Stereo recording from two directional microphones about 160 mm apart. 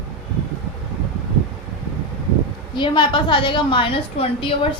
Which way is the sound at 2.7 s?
30° left (ahead or behind).